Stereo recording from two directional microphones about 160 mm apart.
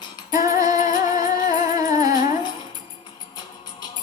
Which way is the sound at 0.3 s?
20° right (ahead or behind).